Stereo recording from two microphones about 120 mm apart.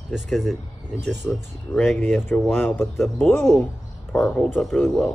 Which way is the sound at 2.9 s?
Centre (ahead or behind).